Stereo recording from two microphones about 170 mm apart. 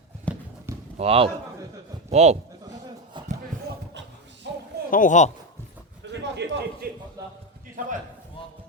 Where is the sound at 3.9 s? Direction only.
90° right.